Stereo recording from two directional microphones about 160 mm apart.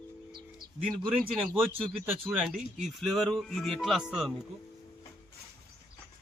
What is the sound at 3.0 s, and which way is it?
Speech, centre (ahead or behind).